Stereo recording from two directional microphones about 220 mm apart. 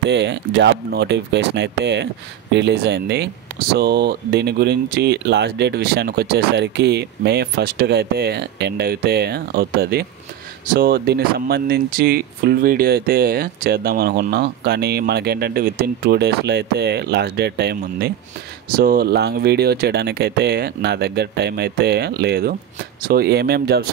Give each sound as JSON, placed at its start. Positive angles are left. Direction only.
{"t": 0.0, "sound": "speech", "side_deg": -50}